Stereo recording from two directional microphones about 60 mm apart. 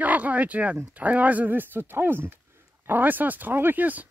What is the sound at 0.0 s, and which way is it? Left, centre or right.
Speech, right.